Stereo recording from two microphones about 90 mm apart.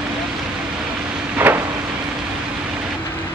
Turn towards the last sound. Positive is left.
turn(degrees=-15)  # may be behind; listen again after turning